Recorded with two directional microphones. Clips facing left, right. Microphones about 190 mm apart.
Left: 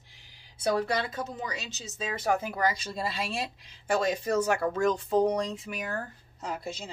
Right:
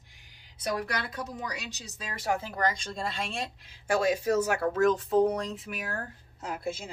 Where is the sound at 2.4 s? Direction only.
5° left (ahead or behind).